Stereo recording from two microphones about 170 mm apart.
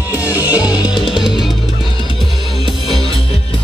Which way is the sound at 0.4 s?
20° left (ahead or behind).